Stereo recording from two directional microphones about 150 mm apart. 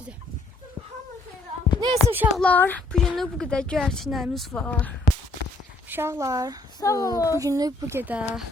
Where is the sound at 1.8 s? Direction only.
30° right (ahead or behind).